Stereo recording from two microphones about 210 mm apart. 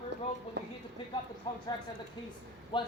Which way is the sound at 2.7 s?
25° left (ahead or behind).